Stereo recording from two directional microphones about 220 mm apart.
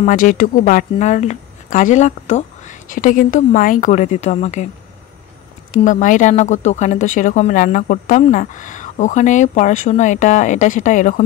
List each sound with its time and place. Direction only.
0.0 s speech: 40° left (ahead or behind)
5.7 s speech: 35° left (ahead or behind)